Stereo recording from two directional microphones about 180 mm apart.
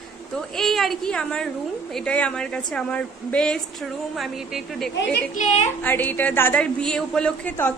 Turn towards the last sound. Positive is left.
turn(degrees=10)  # may be behind; listen again after turning